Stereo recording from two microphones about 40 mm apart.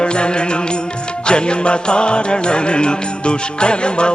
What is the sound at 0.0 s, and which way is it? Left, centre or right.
Music, left.